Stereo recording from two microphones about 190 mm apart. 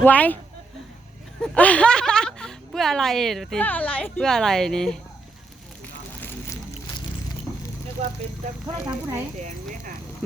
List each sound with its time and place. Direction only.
0.0 s speech: 10° left (ahead or behind)
1.4 s speech: 5° left (ahead or behind)
5.8 s vehicle: 10° left (ahead or behind)
8.6 s speech: 15° right (ahead or behind)
9.4 s speech: 40° right (ahead or behind)